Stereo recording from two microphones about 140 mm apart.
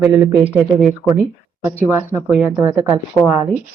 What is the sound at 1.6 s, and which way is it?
Speech, 15° right (ahead or behind).